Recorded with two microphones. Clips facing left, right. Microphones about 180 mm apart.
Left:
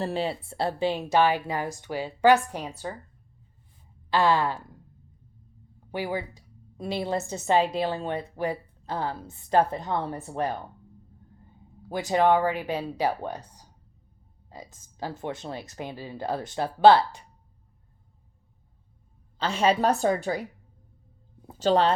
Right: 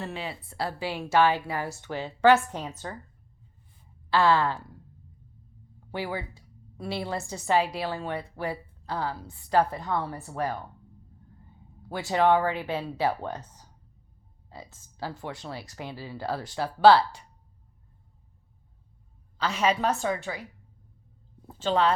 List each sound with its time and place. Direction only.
0.0 s a woman's voice: 30° left (ahead or behind); by 3.0 s 10° left (ahead or behind)
4.1 s a woman's voice: 15° left (ahead or behind)
5.9 s a woman's voice: 15° left (ahead or behind)
11.9 s a woman's voice: 15° left (ahead or behind)
19.4 s a woman's voice: 30° left (ahead or behind)
21.6 s a woman's voice: 35° left (ahead or behind)